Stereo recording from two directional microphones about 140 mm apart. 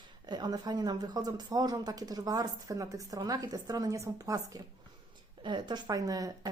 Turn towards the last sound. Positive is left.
turn(degrees=-25)  # may be behind; listen again after turning